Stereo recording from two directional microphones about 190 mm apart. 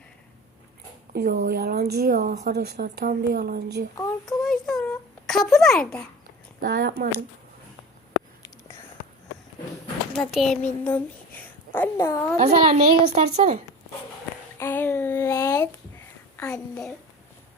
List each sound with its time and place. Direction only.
1.1 s a woman's voice: 55° right (ahead or behind)
2.5 s speech: 55° right (ahead or behind)
4.3 s a child's voice: centre (ahead or behind)
4.9 s a sound: centre (ahead or behind)
6.6 s a woman's voice: 55° right (ahead or behind)
10.1 s a child's voice: centre (ahead or behind)
12.4 s a woman's voice: 35° right (ahead or behind)
14.6 s a sound: 10° left (ahead or behind)